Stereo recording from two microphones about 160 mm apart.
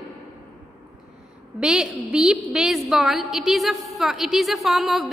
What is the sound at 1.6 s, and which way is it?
A woman's voice, 5° right (ahead or behind).